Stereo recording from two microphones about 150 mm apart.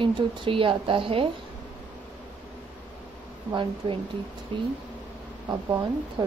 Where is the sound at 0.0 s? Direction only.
35° right (ahead or behind).